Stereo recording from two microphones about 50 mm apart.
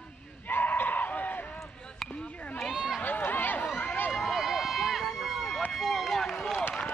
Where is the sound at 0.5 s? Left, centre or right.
Left.